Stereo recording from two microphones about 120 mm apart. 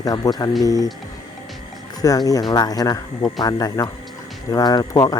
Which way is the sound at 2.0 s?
30° left (ahead or behind).